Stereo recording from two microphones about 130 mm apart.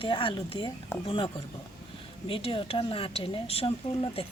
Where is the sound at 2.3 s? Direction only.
45° left (ahead or behind).